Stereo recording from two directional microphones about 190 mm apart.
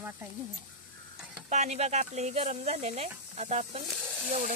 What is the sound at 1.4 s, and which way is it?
Speech, 35° right (ahead or behind).